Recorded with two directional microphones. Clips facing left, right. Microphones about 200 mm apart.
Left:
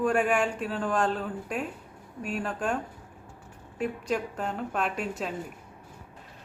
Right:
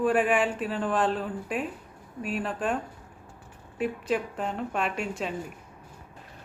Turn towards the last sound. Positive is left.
turn(degrees=0)  # may be behind; listen again after turning